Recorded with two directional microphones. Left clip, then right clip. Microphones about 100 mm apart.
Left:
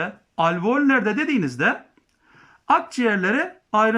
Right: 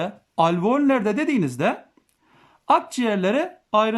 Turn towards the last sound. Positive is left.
turn(degrees=-25)  # may be behind; listen again after turning